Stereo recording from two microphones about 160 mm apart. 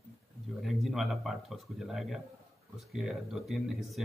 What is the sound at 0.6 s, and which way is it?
Speech, centre (ahead or behind).